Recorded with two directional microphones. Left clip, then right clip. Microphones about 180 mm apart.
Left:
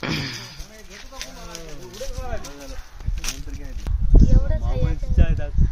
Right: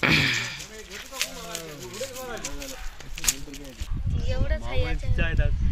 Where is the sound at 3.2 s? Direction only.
5° left (ahead or behind).